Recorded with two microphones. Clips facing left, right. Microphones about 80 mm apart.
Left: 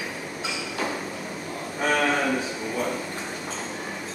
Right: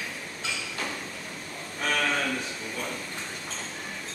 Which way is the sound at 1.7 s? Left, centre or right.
Centre.